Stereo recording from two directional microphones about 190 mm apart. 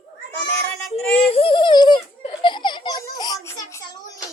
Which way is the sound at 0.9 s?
30° left (ahead or behind).